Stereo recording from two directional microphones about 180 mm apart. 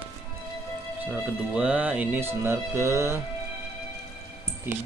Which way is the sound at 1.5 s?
5° right (ahead or behind).